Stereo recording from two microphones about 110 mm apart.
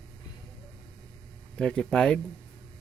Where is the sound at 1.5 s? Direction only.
10° left (ahead or behind).